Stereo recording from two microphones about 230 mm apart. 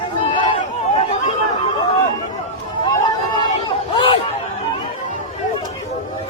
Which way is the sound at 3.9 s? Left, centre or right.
Left.